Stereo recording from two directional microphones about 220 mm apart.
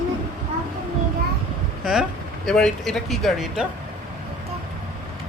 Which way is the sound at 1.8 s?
5° right (ahead or behind).